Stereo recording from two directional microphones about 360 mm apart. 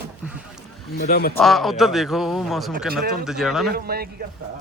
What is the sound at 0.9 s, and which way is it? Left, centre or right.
Speech, left.